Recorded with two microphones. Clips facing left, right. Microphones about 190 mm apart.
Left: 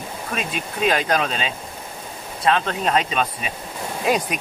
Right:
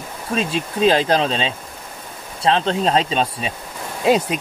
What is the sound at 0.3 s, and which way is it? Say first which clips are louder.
Speech: right 7 dB; 30° right (ahead or behind).